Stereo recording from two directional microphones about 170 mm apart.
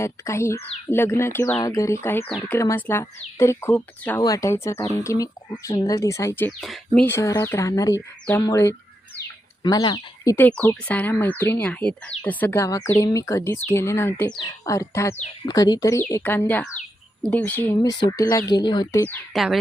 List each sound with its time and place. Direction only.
0.0 s speech: 15° left (ahead or behind)
6.6 s speech: centre (ahead or behind)
7.1 s speech: 15° left (ahead or behind)
17.8 s speech: 20° left (ahead or behind)
19.3 s speech: centre (ahead or behind)